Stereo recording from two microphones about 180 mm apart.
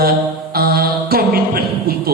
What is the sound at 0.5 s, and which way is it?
Music, 60° right (ahead or behind).